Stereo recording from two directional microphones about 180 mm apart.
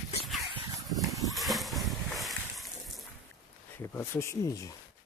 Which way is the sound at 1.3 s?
Centre (ahead or behind).